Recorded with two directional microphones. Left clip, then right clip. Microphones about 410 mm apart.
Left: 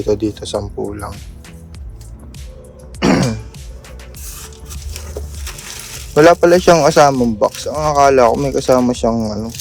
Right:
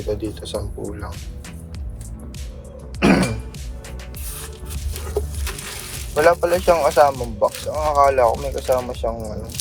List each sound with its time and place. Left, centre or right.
0.1 s speech: centre
3.0 s throat clearing: centre
6.1 s a man's voice: left